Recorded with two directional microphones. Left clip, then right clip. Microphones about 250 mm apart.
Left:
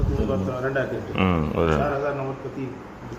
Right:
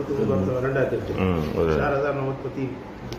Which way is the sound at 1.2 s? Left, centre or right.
Left.